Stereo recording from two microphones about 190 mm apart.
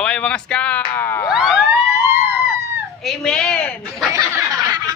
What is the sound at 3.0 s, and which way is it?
A man's voice, 5° left (ahead or behind).